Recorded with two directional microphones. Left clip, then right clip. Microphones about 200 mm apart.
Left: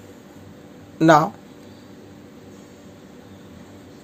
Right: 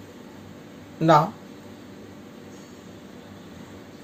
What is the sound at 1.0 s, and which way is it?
Speech, 45° left (ahead or behind).